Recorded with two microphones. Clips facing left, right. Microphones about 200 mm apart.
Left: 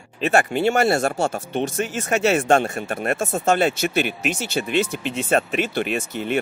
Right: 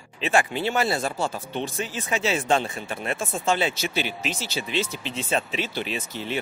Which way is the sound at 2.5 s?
50° left (ahead or behind).